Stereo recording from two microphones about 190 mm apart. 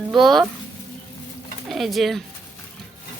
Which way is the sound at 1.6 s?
Centre (ahead or behind).